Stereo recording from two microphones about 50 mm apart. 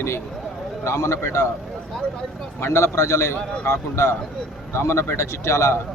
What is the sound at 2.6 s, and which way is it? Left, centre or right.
Speech, left.